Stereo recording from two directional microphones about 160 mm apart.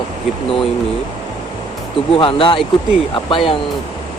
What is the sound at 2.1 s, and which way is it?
Speech, 35° left (ahead or behind).